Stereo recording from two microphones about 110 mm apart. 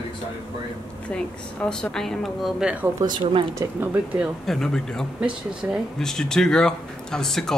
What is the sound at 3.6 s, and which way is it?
Speech, 30° right (ahead or behind).